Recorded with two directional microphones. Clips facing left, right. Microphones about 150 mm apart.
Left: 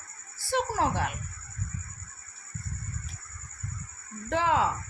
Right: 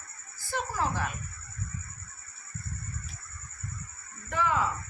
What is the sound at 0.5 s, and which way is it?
Speech, 70° left (ahead or behind).